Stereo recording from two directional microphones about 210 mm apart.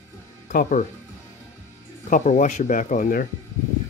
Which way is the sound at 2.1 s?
35° left (ahead or behind).